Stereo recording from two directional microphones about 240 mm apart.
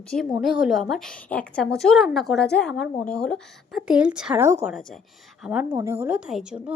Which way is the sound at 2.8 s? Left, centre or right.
Left.